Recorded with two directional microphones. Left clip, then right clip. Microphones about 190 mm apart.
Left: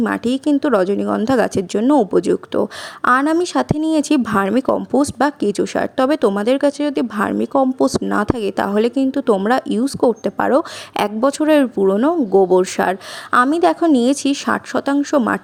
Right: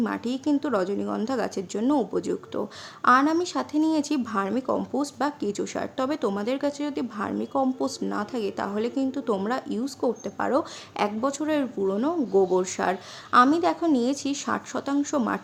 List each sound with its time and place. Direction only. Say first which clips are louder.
0.0 s speech: left 9 dB; 40° left (ahead or behind)